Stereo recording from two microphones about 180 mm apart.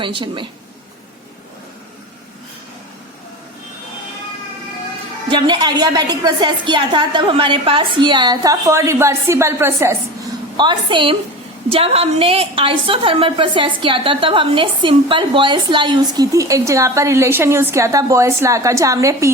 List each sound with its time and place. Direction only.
0.0 s a woman's voice: 25° right (ahead or behind)
5.3 s a woman's voice: 25° right (ahead or behind)
10.6 s a woman's voice: 25° right (ahead or behind)